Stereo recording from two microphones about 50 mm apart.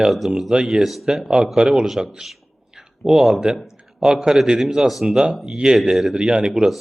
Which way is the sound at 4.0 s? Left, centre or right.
Centre.